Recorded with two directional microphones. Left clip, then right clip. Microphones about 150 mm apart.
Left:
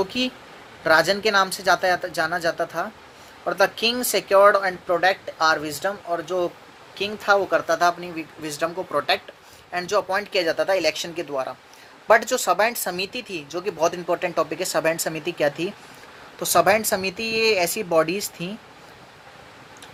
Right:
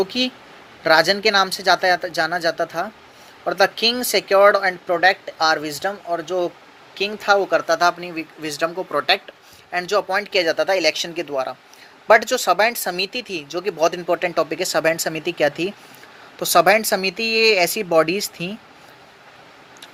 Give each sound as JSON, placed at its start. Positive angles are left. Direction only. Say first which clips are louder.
{"t": 0.0, "sound": "speech", "louder": "right 3 dB", "side_deg": -20}
{"t": 9.7, "sound": "speech", "louder": "right 3 dB", "side_deg": -20}